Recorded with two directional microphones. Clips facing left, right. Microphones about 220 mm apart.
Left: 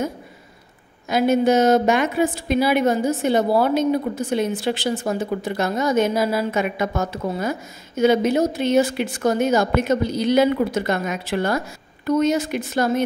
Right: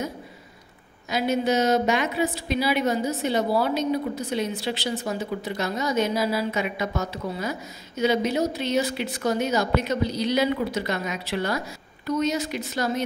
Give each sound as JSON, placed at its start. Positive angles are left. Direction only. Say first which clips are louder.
{"t": 1.0, "sound": "a woman's voice", "louder": "left 6 dB", "side_deg": 50}